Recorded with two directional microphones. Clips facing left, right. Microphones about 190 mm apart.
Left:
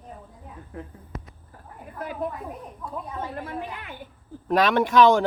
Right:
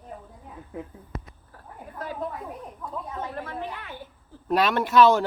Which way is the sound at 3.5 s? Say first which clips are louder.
Left 1 dB; 10° left (ahead or behind).